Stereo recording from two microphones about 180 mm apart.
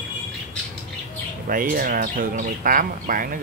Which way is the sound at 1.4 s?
50° right (ahead or behind).